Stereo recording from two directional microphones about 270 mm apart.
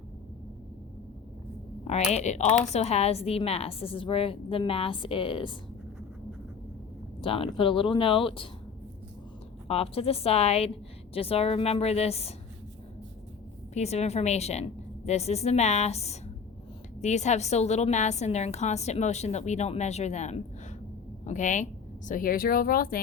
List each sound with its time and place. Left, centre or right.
1.9 s a woman's voice: left
7.2 s a woman's voice: centre
9.6 s a woman's voice: left
13.7 s a woman's voice: left